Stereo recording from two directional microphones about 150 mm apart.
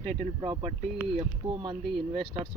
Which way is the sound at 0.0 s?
45° right (ahead or behind).